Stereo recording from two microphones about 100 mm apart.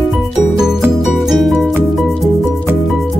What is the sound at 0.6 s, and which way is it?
Music, 5° right (ahead or behind).